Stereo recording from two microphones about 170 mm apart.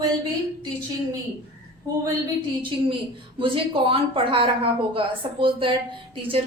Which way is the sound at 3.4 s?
30° right (ahead or behind).